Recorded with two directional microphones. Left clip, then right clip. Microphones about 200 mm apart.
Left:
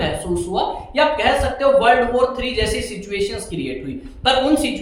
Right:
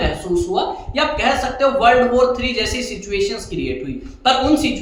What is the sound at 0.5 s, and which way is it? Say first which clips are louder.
A woman's voice: left 1 dB; 15° right (ahead or behind).